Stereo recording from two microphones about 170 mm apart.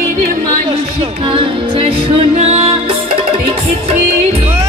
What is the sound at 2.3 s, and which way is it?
Music, 35° right (ahead or behind).